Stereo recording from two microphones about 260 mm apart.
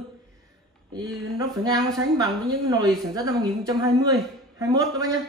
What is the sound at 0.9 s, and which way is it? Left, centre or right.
A woman's voice, centre.